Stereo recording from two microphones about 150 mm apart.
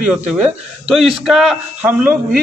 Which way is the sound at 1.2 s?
Centre (ahead or behind).